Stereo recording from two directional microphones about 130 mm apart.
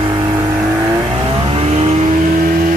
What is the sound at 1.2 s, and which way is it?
Vehicle, 40° right (ahead or behind).